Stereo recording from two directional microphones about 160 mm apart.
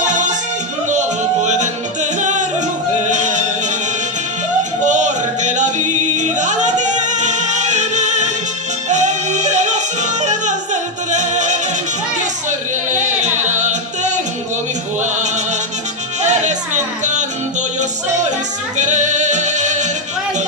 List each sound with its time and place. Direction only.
0.0 s music: 50° right (ahead or behind)
4.8 s music: 50° right (ahead or behind)
16.2 s music: 45° right (ahead or behind)